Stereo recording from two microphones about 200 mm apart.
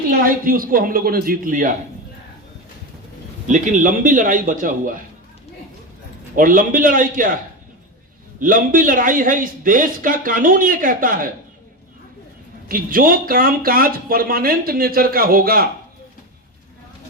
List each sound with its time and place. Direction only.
0.1 s speech: 45° right (ahead or behind)
3.4 s a man's voice: 40° right (ahead or behind)
6.3 s speech: 45° right (ahead or behind)
8.4 s speech: 45° right (ahead or behind)
12.6 s speech: 45° right (ahead or behind)